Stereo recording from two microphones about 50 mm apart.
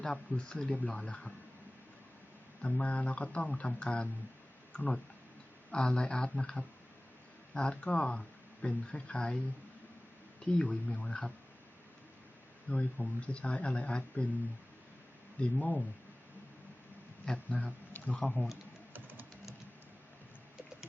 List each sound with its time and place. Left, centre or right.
0.0 s speech: left
0.7 s speech: left
2.6 s speech: left
10.4 s speech: left
12.6 s speech: left
15.4 s speech: left
17.3 s speech: left
18.9 s music: right